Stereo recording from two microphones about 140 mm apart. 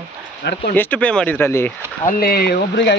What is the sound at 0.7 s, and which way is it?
Speech, 15° left (ahead or behind).